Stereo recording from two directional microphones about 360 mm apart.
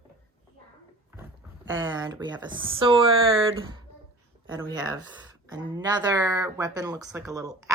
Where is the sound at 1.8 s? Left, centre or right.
Centre.